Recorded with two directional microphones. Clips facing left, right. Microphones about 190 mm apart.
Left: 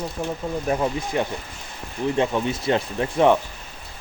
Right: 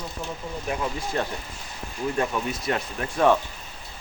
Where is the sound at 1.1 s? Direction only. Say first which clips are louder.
Left 3 dB; 15° left (ahead or behind).